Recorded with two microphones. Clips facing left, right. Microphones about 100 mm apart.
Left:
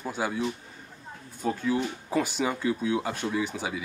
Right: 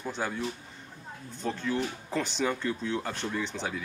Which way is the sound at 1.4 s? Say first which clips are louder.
Left 3 dB; 10° left (ahead or behind).